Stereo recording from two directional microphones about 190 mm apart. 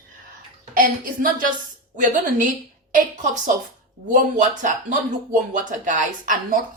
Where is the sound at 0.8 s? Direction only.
50° right (ahead or behind).